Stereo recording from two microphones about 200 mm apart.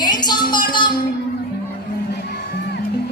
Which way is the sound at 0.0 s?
20° left (ahead or behind).